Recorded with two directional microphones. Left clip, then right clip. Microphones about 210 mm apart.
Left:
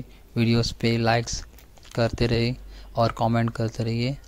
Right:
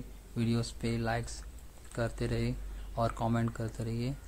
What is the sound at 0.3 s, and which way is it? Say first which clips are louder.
Speech: left 11 dB; 35° left (ahead or behind).